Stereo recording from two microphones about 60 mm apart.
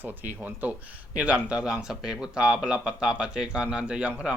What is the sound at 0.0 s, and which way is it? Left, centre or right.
Speech, right.